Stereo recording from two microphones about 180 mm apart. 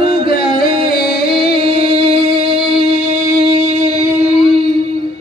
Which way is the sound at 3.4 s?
40° right (ahead or behind).